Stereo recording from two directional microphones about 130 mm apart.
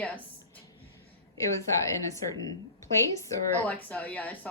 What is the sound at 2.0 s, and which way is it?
A woman's voice, 25° left (ahead or behind).